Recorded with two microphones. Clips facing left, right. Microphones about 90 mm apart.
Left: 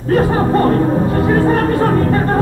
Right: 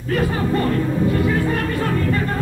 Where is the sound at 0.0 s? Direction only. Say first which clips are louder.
Left 7 dB; 40° left (ahead or behind).